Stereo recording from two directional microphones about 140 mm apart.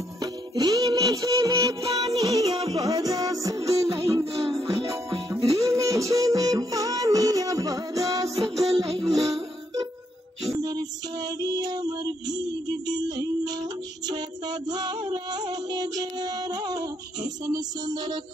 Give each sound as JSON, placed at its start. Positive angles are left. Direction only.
{"t": 0.2, "sound": "music", "side_deg": -25}
{"t": 10.6, "sound": "music", "side_deg": -30}